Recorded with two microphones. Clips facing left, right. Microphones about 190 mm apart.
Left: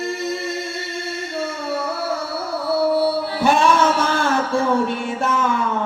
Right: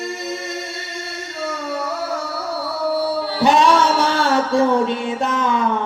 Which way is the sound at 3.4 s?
15° right (ahead or behind).